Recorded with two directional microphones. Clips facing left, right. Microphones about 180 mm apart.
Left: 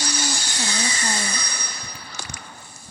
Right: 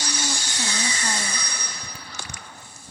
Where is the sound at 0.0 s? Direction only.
65° left (ahead or behind).